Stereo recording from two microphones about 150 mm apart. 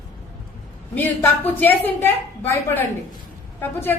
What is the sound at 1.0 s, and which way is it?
Speech, 10° left (ahead or behind).